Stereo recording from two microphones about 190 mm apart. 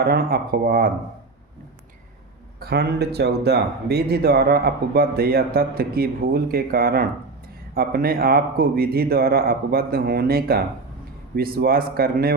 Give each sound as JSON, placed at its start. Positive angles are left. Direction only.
{"t": 0.0, "sound": "speech", "side_deg": -55}
{"t": 2.6, "sound": "speech", "side_deg": -55}